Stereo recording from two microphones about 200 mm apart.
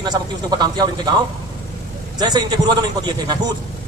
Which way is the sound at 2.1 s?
20° right (ahead or behind).